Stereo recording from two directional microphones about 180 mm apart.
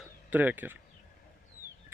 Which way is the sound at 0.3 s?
10° right (ahead or behind).